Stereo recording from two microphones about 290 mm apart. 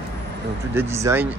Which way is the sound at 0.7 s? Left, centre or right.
Centre.